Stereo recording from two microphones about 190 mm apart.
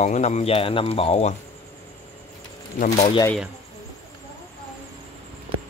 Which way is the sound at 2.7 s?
40° left (ahead or behind).